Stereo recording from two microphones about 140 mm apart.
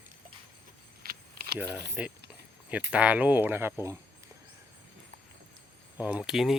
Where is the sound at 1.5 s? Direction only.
10° right (ahead or behind).